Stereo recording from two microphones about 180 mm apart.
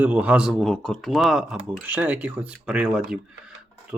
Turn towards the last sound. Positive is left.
turn(degrees=-5)  # may be behind; listen again after turning